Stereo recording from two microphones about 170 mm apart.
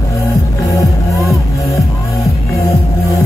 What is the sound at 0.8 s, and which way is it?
Music, 20° left (ahead or behind).